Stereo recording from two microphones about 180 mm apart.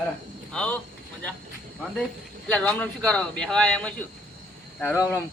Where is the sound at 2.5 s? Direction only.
5° left (ahead or behind).